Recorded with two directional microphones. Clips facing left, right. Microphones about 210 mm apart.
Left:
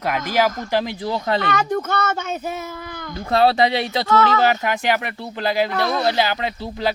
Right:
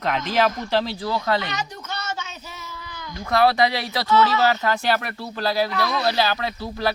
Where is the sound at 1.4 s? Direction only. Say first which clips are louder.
Left 10 dB; 55° left (ahead or behind).